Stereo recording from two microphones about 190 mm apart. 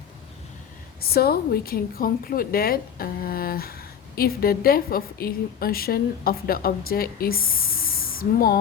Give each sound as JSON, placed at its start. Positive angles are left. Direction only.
{"t": 1.1, "sound": "a woman's voice", "side_deg": 55}
{"t": 7.9, "sound": "spray", "side_deg": 50}